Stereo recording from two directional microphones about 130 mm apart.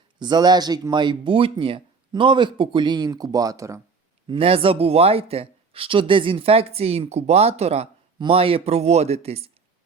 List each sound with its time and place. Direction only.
0.2 s speech: 35° right (ahead or behind)
4.3 s speech: 45° right (ahead or behind)